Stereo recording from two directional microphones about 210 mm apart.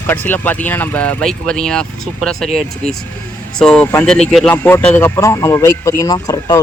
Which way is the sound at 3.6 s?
5° left (ahead or behind).